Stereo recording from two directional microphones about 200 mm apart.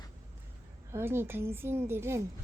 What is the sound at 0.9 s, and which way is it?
A woman's voice, 10° right (ahead or behind).